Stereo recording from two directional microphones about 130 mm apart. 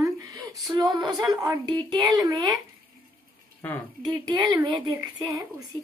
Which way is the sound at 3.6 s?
15° left (ahead or behind).